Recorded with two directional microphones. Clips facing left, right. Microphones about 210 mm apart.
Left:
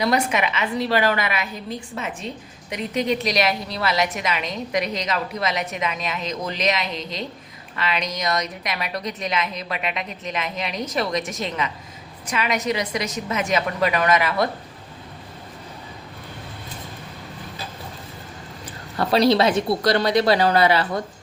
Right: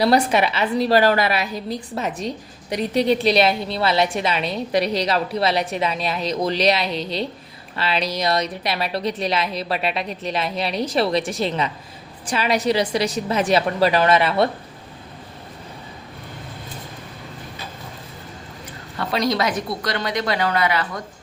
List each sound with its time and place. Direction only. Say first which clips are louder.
0.0 s a woman's voice: right 4 dB; 35° right (ahead or behind)
18.9 s a woman's voice: left 4 dB; 35° left (ahead or behind)